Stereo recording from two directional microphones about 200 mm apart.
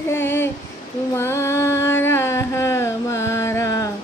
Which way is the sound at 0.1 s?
10° left (ahead or behind).